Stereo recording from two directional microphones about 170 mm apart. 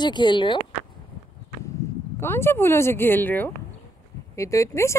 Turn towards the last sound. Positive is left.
turn(degrees=15)  # may be behind; listen again after turning